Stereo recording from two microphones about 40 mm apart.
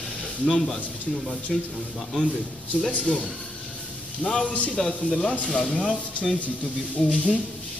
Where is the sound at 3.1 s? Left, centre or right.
Centre.